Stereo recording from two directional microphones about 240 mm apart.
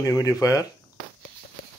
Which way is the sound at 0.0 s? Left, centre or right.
Centre.